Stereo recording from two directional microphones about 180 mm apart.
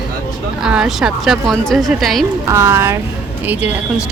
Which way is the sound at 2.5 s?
15° right (ahead or behind).